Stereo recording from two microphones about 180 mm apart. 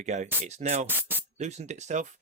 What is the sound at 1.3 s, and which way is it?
Speech, 40° right (ahead or behind).